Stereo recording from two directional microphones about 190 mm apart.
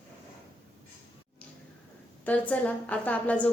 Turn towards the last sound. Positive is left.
turn(degrees=10)  # may be behind; listen again after turning